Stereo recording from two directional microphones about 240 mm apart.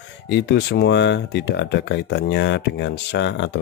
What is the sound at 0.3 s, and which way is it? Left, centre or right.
Speech, left.